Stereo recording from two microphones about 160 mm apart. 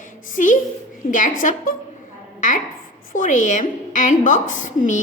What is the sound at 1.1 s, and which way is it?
Speech, 55° left (ahead or behind).